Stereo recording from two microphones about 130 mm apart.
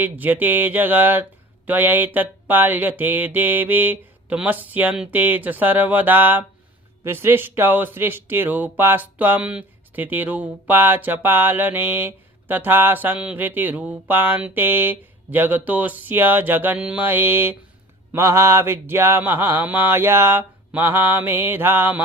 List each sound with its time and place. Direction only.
0.0 s speech: 15° right (ahead or behind)